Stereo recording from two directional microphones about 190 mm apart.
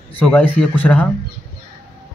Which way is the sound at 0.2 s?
5° left (ahead or behind).